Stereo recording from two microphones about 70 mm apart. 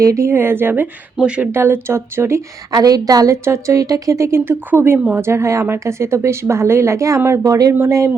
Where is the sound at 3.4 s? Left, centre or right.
Right.